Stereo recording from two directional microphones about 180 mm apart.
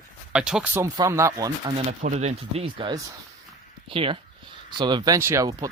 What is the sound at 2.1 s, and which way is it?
Speech, 40° right (ahead or behind).